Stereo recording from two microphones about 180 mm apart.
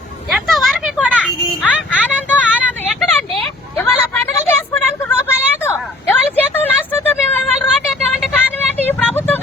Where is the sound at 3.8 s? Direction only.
10° left (ahead or behind).